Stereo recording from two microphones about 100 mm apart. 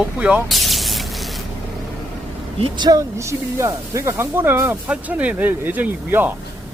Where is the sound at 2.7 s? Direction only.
45° right (ahead or behind).